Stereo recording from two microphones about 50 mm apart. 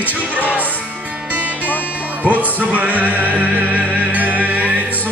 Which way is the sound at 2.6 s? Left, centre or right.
Right.